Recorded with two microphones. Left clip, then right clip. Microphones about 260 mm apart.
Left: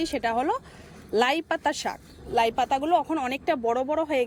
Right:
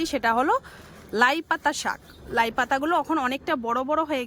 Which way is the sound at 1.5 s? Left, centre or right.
Right.